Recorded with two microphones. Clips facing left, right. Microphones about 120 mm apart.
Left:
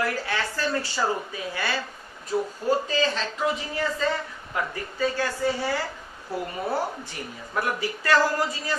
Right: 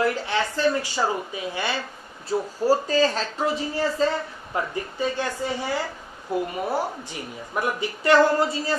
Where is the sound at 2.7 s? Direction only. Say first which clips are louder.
Right 4 dB; 40° right (ahead or behind); by 6.4 s 20° right (ahead or behind).